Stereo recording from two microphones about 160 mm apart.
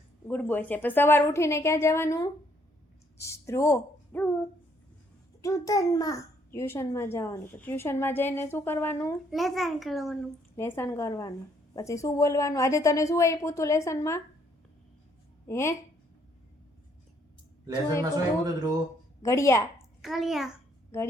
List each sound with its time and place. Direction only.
0.3 s a child's voice: 10° left (ahead or behind)
9.3 s a child's voice: centre (ahead or behind)
10.6 s a woman's voice: 15° left (ahead or behind)
15.4 s speech: 15° left (ahead or behind)
18.4 s speech: 20° right (ahead or behind)
19.2 s a woman's voice: 20° left (ahead or behind)
20.0 s a child's voice: centre (ahead or behind)